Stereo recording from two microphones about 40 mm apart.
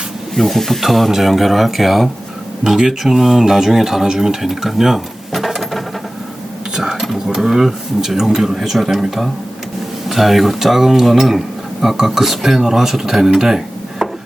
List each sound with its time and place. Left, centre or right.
0.3 s speech: centre
6.7 s a sound: centre
7.3 s speech: centre